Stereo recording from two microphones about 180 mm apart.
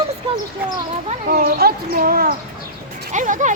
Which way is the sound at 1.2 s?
60° right (ahead or behind).